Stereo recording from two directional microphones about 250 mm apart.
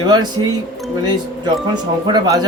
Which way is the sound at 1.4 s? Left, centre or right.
Centre.